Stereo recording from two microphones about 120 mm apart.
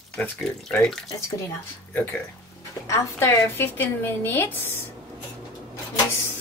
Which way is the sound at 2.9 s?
20° left (ahead or behind).